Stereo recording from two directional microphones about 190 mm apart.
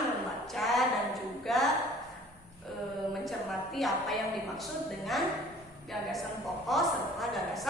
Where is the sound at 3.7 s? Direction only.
Centre (ahead or behind).